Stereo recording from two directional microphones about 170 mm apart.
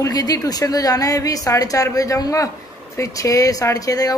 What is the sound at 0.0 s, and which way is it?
A woman's voice, 20° left (ahead or behind).